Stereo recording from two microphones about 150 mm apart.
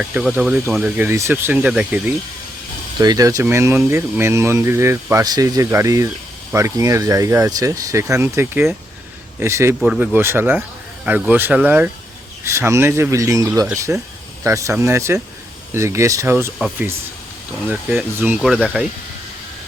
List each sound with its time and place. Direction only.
0.0 s speech: 5° right (ahead or behind)
3.0 s speech: 25° right (ahead or behind)
17.7 s speech: 10° right (ahead or behind)